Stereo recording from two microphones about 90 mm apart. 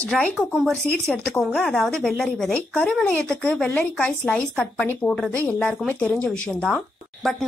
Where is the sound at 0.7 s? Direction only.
10° left (ahead or behind).